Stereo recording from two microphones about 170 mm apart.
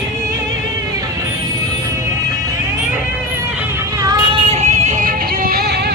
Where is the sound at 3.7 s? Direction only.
20° right (ahead or behind).